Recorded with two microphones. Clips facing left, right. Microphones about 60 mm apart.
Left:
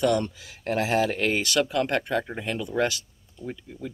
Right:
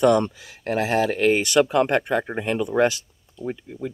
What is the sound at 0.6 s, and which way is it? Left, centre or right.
Speech, centre.